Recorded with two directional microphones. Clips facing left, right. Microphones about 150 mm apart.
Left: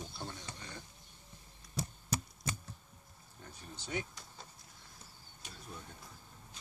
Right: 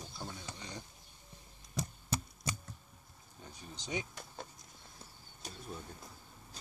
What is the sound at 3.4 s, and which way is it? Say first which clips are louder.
Speech: right 1 dB; 15° right (ahead or behind).